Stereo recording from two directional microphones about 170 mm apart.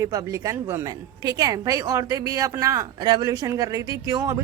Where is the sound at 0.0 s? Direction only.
20° right (ahead or behind).